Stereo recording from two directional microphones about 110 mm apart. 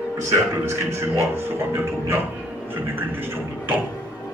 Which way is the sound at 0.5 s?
20° right (ahead or behind).